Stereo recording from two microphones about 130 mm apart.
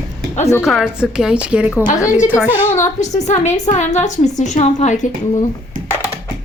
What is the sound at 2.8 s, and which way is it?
A woman's voice, 65° left (ahead or behind).